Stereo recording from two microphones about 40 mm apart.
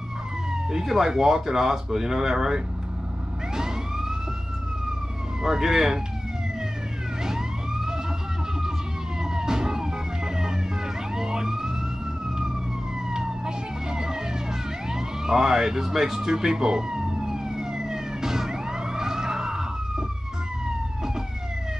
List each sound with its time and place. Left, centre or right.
0.5 s speech: centre
5.4 s speech: centre
7.2 s police car: centre
9.2 s emergency vehicle: centre
13.1 s emergency vehicle: centre
14.9 s police car: centre